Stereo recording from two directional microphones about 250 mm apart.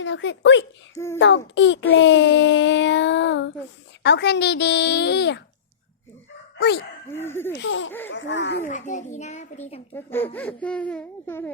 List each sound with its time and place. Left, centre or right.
0.0 s child singing: left
0.9 s speech: centre
1.2 s child singing: left
6.6 s speech: left
7.2 s speech: centre
7.5 s child singing: left
8.7 s a child's voice: left
9.9 s speech: centre